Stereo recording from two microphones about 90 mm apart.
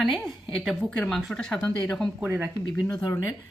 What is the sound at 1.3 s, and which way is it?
Speech, 10° left (ahead or behind).